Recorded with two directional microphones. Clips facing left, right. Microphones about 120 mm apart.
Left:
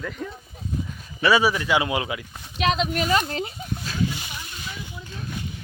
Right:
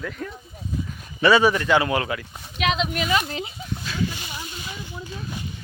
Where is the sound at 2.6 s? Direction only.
35° left (ahead or behind).